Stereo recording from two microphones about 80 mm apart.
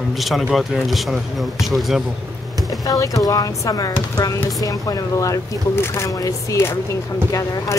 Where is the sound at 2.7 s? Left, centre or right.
Left.